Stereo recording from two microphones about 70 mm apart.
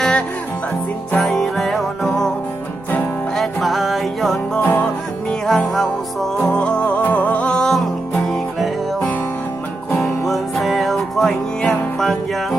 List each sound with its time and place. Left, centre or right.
0.0 s music: centre
3.3 s music: centre
6.4 s music: centre
10.0 s music: centre